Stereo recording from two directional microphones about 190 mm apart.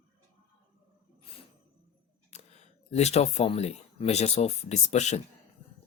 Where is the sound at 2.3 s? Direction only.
35° left (ahead or behind).